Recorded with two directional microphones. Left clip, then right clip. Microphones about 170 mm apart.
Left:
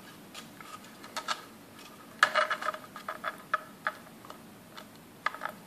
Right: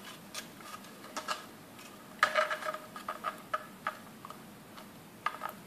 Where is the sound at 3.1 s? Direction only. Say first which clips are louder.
Left 3 dB; 20° left (ahead or behind).